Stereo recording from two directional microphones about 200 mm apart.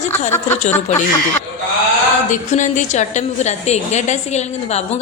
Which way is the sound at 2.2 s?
40° left (ahead or behind).